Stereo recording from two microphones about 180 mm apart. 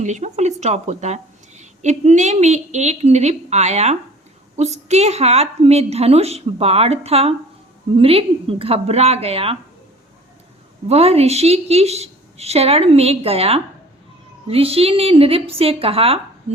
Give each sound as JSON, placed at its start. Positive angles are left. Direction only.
{"t": 0.0, "sound": "a woman's voice", "side_deg": -40}
{"t": 10.8, "sound": "a woman's voice", "side_deg": -35}